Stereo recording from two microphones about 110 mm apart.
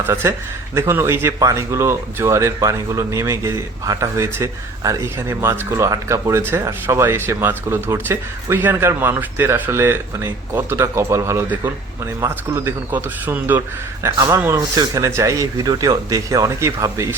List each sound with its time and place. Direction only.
0.1 s speech: 25° right (ahead or behind)